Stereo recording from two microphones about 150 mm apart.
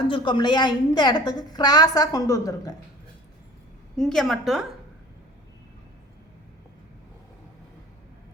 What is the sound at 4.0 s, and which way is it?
Speech, centre (ahead or behind).